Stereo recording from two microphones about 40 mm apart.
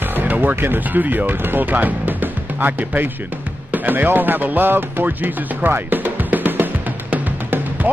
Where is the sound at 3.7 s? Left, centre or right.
Right.